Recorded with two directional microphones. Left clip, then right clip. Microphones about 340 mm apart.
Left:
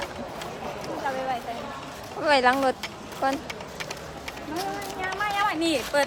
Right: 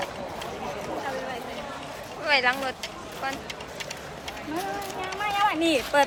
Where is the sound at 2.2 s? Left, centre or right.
Centre.